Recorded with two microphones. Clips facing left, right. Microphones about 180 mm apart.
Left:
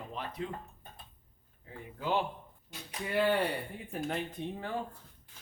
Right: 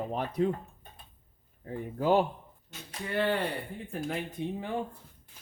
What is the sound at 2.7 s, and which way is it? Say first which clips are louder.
Speech: even; 10° left (ahead or behind).